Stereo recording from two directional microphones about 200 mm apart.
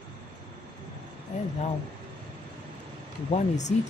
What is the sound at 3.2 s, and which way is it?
Speech, 35° left (ahead or behind).